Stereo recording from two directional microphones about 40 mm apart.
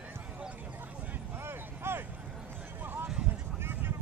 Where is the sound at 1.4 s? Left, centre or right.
Right.